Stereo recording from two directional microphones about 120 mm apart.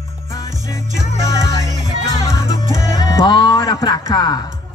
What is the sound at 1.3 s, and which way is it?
Music, 30° left (ahead or behind).